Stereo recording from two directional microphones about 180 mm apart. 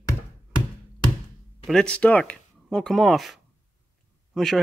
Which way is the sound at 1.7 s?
5° left (ahead or behind).